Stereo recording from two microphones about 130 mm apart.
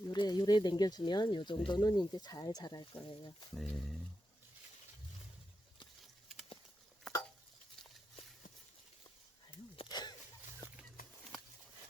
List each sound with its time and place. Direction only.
0.1 s speech: 30° left (ahead or behind)
3.5 s speech: centre (ahead or behind)
9.7 s a sound: 35° left (ahead or behind)